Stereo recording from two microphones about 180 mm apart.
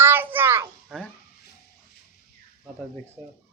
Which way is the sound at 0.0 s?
10° right (ahead or behind).